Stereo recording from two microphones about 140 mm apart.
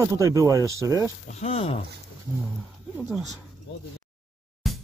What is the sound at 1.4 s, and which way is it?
Speech, 45° left (ahead or behind).